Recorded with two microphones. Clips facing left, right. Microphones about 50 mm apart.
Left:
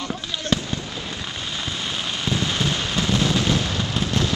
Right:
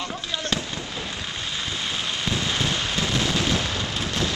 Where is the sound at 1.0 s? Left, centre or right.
Centre.